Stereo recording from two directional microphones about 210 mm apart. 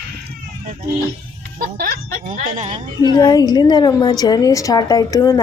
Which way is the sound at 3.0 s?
20° left (ahead or behind).